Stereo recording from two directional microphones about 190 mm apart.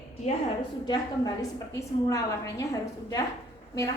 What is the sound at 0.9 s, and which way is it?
A woman's voice, 20° left (ahead or behind).